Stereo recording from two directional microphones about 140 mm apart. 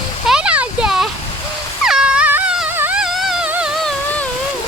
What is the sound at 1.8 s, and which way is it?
Wail, 5° right (ahead or behind).